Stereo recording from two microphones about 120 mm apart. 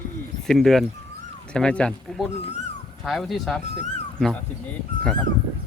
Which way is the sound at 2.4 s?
65° left (ahead or behind).